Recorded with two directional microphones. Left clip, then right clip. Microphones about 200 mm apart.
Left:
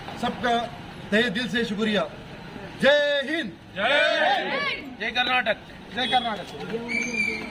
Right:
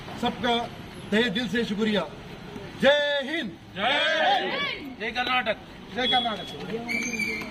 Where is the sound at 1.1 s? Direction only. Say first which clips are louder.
Left 2 dB; 5° left (ahead or behind); by 4.4 s 10° right (ahead or behind).